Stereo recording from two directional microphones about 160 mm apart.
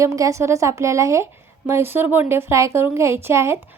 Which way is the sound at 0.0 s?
20° right (ahead or behind).